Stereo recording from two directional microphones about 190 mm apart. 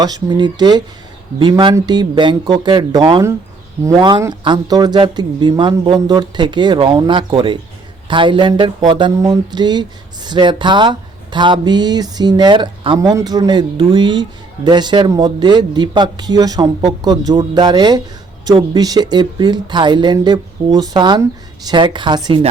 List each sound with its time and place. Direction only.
0.0 s speech: 20° right (ahead or behind)